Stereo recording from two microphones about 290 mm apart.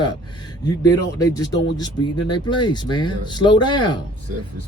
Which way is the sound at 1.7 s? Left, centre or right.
Centre.